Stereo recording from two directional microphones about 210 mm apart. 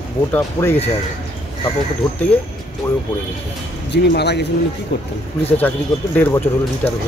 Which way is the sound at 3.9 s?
50° left (ahead or behind).